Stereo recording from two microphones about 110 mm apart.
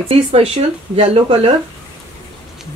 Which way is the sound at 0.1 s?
60° right (ahead or behind).